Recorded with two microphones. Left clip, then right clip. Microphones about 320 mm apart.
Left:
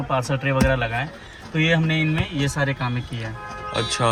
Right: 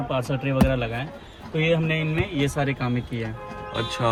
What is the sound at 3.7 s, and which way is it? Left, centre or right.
Speech, centre.